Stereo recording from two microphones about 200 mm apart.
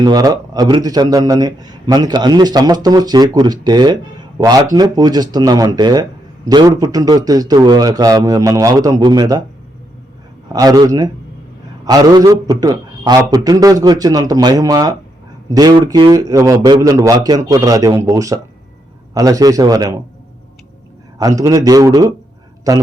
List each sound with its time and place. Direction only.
0.0 s speech: 20° right (ahead or behind)
10.5 s speech: 20° right (ahead or behind)
21.2 s speech: 20° right (ahead or behind)